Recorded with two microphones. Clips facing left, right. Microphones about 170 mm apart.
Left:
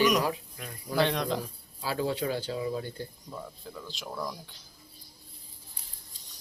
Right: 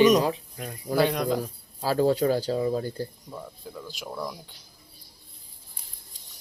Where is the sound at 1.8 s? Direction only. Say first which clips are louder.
Right 8 dB; 40° right (ahead or behind).